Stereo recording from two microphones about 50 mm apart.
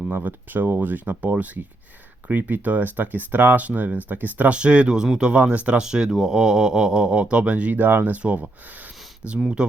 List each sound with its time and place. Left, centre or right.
0.1 s speech: right
4.5 s speech: right
5.8 s speech: centre; by 8.2 s right
8.2 s speech: right
9.6 s speech: centre